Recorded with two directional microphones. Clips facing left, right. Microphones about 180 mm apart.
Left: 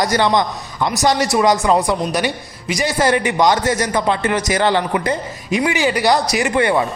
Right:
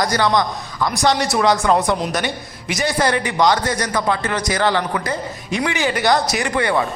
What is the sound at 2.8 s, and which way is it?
Speech, 10° left (ahead or behind).